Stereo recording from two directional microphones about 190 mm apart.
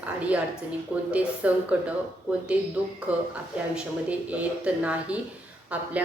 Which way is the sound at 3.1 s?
10° right (ahead or behind).